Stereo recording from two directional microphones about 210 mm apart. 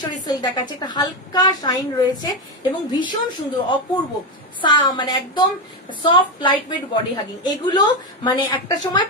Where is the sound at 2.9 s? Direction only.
20° left (ahead or behind).